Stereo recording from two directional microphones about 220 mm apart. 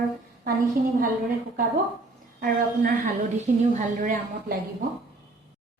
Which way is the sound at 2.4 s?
40° right (ahead or behind).